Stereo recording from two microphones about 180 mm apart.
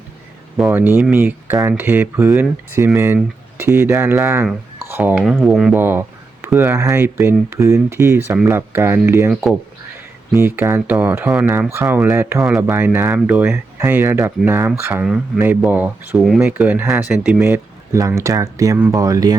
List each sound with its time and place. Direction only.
0.7 s speech: 10° right (ahead or behind)
9.3 s speech: 5° right (ahead or behind); by 19.4 s 20° right (ahead or behind)